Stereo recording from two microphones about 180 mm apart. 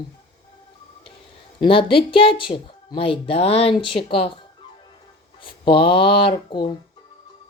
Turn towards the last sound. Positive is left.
turn(degrees=25)  # may be behind; listen again after turning